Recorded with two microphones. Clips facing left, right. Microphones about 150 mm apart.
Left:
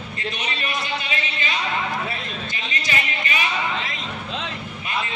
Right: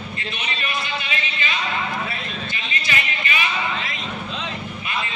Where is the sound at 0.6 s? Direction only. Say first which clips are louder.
Even; 35° left (ahead or behind).